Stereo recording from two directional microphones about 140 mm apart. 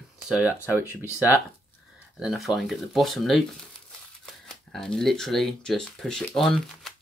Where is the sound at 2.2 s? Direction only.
Centre (ahead or behind).